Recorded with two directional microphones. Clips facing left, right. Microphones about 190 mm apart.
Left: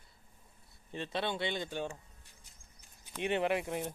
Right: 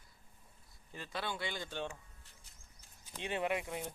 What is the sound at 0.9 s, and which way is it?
Speech, 25° left (ahead or behind).